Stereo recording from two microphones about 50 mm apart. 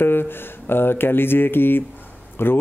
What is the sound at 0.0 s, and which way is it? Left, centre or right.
Speech, left.